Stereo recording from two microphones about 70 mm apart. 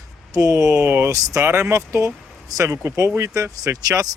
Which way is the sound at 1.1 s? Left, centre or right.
Right.